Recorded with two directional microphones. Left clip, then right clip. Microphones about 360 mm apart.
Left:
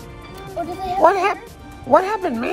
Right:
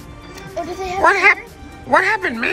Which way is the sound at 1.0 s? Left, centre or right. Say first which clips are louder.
Right 3 dB; centre.